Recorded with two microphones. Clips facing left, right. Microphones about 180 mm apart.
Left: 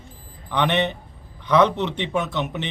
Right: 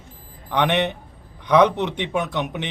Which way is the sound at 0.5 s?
10° right (ahead or behind).